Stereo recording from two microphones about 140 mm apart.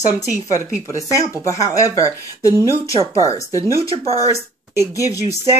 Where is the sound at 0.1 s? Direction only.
25° left (ahead or behind).